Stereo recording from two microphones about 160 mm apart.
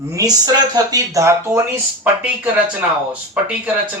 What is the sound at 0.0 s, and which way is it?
Speech, 20° right (ahead or behind).